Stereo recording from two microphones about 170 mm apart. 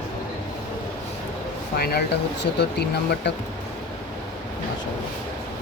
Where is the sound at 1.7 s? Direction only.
65° left (ahead or behind).